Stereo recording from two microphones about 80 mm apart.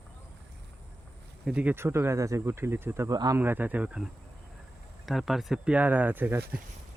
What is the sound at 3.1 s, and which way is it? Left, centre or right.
Speech, right.